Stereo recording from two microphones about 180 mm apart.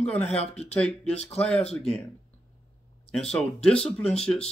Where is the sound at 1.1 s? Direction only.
40° left (ahead or behind).